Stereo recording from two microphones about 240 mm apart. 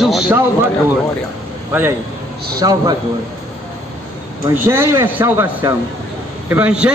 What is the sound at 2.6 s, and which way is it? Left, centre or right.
Speech, centre.